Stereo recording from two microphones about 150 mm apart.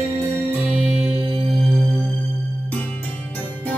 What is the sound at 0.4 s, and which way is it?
Music, 15° right (ahead or behind).